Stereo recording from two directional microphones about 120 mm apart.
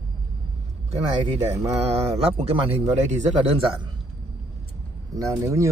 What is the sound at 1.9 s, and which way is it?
A man's voice, 55° right (ahead or behind).